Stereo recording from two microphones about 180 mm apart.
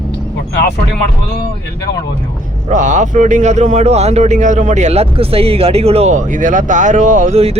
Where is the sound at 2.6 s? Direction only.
45° right (ahead or behind).